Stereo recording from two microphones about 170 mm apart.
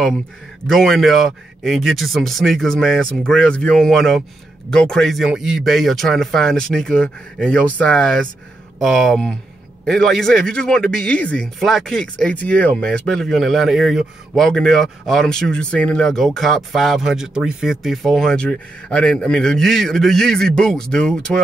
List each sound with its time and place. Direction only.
0.7 s speech: centre (ahead or behind)